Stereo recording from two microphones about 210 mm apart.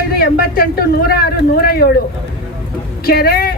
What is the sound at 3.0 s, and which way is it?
Speech, 45° left (ahead or behind).